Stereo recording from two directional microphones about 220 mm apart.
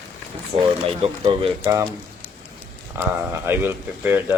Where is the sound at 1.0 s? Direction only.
30° right (ahead or behind).